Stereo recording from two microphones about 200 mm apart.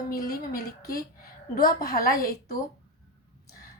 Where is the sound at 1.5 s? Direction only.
45° left (ahead or behind).